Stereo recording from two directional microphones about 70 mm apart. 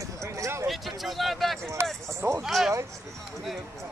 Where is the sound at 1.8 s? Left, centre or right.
Right.